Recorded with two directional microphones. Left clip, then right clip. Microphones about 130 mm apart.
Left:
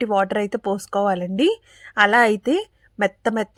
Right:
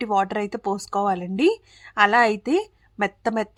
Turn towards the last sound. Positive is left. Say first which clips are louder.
# left 3 dB
turn(degrees=20)  # may be behind; listen again after turning